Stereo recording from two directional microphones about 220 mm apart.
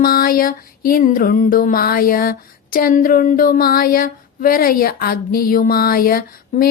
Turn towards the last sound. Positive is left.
turn(degrees=40)  # may be behind; listen again after turning